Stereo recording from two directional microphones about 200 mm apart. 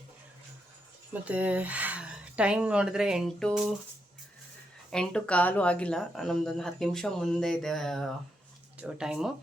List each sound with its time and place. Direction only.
1.1 s speech: 5° right (ahead or behind)
4.9 s speech: 5° left (ahead or behind)